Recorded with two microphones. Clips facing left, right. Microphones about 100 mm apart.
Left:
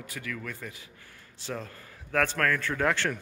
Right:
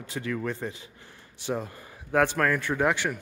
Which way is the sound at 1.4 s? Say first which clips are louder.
Right 6 dB; 20° right (ahead or behind).